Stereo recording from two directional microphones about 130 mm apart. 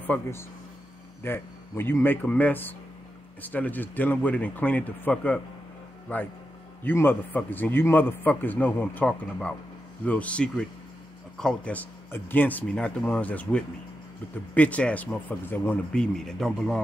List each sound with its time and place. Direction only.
0.0 s a man's voice: 15° left (ahead or behind)